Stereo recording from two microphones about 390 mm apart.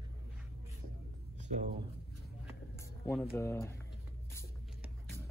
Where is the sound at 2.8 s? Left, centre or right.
Centre.